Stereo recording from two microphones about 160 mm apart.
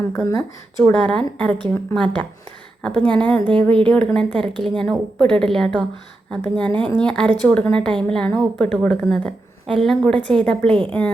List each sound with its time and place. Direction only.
0.9 s a woman's voice: 5° left (ahead or behind)
3.5 s speech: 30° right (ahead or behind)
3.8 s a woman's voice: 5° left (ahead or behind)